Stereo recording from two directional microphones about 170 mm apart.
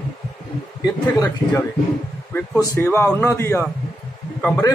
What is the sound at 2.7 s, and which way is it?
A man's voice, 15° left (ahead or behind).